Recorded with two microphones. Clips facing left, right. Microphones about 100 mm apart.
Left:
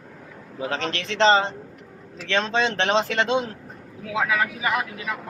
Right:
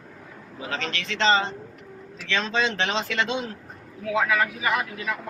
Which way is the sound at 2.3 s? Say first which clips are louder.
Left 3 dB; 40° left (ahead or behind).